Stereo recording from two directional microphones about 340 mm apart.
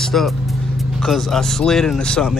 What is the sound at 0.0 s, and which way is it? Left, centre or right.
Vehicle, centre.